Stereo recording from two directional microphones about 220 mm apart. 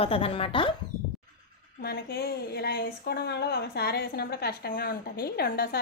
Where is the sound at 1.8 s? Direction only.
45° left (ahead or behind).